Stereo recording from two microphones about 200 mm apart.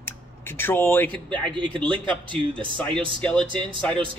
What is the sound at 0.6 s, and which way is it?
Speech, 10° left (ahead or behind).